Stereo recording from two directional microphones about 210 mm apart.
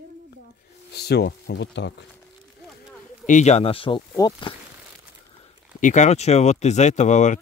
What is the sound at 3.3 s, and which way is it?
Speech, 35° left (ahead or behind).